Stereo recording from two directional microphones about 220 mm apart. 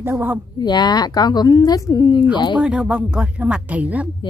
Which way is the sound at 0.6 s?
20° left (ahead or behind).